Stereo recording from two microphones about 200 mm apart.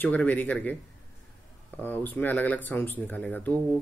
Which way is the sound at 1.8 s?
10° left (ahead or behind).